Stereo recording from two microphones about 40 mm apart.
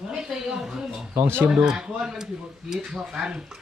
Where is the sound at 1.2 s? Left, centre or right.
Right.